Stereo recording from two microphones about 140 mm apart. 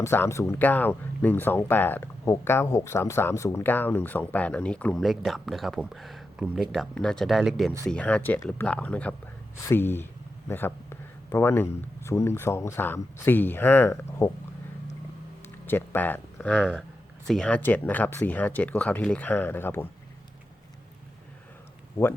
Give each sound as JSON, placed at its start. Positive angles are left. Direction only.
{"t": 0.0, "sound": "speech", "side_deg": 20}
{"t": 7.9, "sound": "speech", "side_deg": 10}
{"t": 15.6, "sound": "speech", "side_deg": 15}